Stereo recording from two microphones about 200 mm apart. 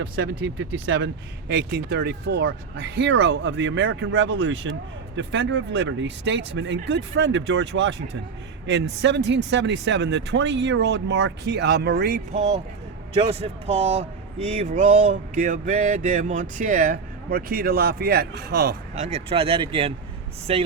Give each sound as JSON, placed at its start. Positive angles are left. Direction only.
{"t": 0.6, "sound": "speech", "side_deg": -65}
{"t": 13.1, "sound": "speech", "side_deg": -30}
{"t": 18.9, "sound": "speech", "side_deg": -30}